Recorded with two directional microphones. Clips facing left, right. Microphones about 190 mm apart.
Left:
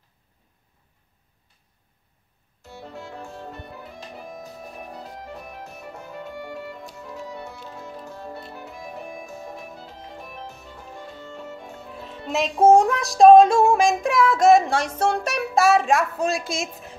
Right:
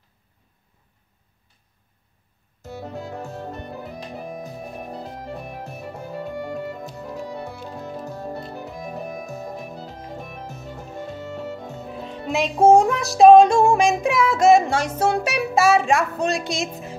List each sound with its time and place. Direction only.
2.6 s music: 45° right (ahead or behind)
11.9 s music: centre (ahead or behind)